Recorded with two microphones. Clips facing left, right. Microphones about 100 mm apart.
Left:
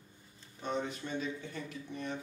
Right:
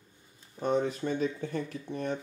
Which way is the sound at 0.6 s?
45° right (ahead or behind).